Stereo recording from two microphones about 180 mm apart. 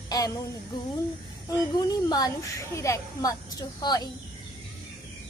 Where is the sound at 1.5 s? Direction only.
20° left (ahead or behind).